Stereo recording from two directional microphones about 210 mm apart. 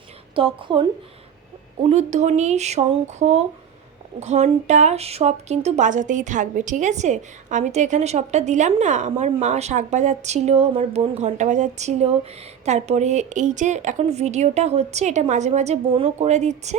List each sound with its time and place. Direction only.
0.3 s a woman's voice: 25° right (ahead or behind)